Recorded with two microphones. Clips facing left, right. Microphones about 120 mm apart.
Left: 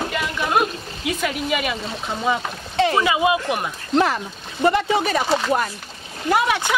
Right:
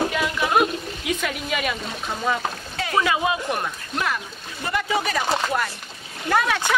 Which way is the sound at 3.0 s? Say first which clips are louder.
Left 3 dB; 5° left (ahead or behind).